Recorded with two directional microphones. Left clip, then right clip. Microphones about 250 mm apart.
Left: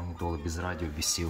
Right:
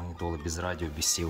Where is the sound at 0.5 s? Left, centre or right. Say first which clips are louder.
Right 2 dB; centre.